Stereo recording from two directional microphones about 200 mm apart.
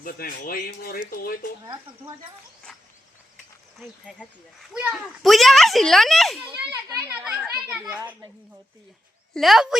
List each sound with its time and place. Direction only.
0.0 s speech: 45° left (ahead or behind)
3.8 s a child's voice: 5° left (ahead or behind)
6.5 s a child's voice: 15° right (ahead or behind)
9.3 s a child's voice: centre (ahead or behind)